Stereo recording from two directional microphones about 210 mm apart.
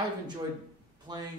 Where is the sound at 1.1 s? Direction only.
20° right (ahead or behind).